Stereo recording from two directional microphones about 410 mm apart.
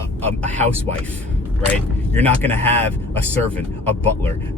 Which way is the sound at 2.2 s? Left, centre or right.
Centre.